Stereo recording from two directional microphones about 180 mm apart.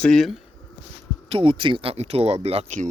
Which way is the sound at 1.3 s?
30° right (ahead or behind).